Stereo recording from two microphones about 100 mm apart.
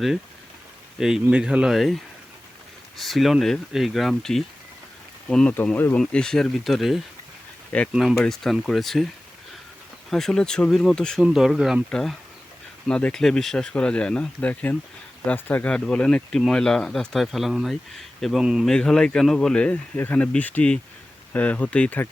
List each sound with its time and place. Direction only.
0.9 s speech: 5° right (ahead or behind)
3.0 s speech: centre (ahead or behind)
5.7 s speech: 20° left (ahead or behind)
6.0 s speech: 5° left (ahead or behind)
8.2 s speech: 5° left (ahead or behind)
10.1 s speech: 5° left (ahead or behind)
11.2 s speech: 5° right (ahead or behind)
11.9 s speech: 5° left (ahead or behind)
18.7 s speech: 5° left (ahead or behind)